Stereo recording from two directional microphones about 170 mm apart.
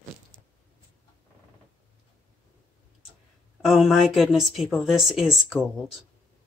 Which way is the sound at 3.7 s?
Centre (ahead or behind).